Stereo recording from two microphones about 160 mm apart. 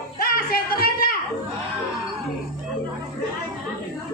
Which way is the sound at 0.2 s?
65° left (ahead or behind).